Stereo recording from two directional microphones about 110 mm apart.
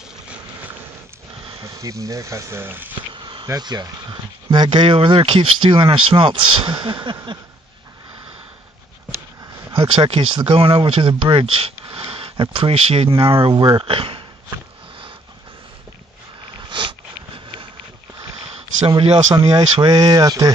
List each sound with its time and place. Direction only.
1.6 s speech: 30° right (ahead or behind)
3.1 s insect: 45° right (ahead or behind)
3.4 s speech: 40° right (ahead or behind)
9.8 s speech: 50° right (ahead or behind)
16.6 s a sound: 45° right (ahead or behind)
19.5 s speech: 40° right (ahead or behind)